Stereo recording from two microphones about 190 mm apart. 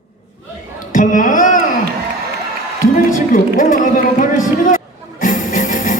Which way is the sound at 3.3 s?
45° left (ahead or behind).